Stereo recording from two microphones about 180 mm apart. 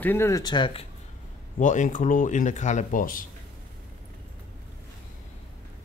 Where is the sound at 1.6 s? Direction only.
45° left (ahead or behind).